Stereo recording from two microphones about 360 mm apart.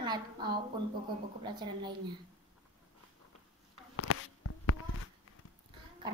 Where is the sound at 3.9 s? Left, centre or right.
Left.